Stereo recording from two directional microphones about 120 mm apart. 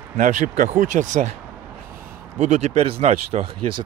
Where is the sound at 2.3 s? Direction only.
80° right; by 3.4 s 60° right (ahead or behind).